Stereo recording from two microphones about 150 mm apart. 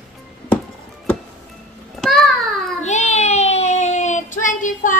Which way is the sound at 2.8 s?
50° left (ahead or behind).